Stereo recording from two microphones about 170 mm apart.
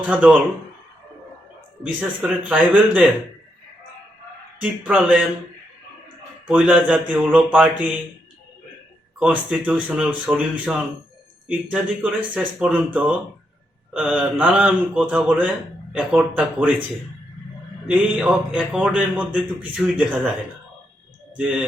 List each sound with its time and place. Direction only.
0.1 s speech: 10° right (ahead or behind)
2.5 s speech: 5° right (ahead or behind)
4.6 s a man's voice: 5° right (ahead or behind)
6.5 s speech: 5° right (ahead or behind)
9.1 s speech: 5° right (ahead or behind)
17.8 s speech: 5° right (ahead or behind)
21.3 s a man's voice: 5° right (ahead or behind)